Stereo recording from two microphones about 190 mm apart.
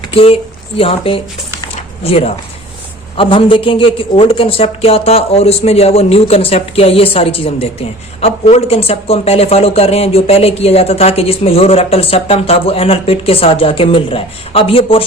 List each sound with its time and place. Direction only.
0.1 s a man's voice: 30° left (ahead or behind)